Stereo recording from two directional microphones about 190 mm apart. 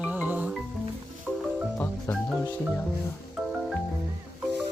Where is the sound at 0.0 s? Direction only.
10° right (ahead or behind).